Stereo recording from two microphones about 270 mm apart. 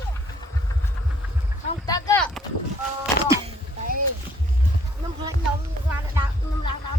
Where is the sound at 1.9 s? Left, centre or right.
Centre.